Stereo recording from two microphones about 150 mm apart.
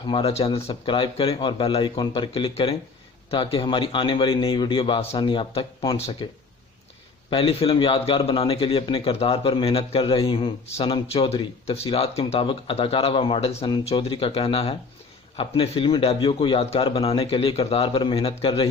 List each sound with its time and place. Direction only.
0.1 s a man's voice: 35° left (ahead or behind)
7.3 s a man's voice: 40° left (ahead or behind)